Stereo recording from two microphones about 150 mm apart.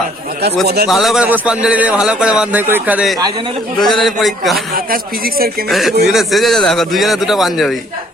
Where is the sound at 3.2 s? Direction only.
35° right (ahead or behind).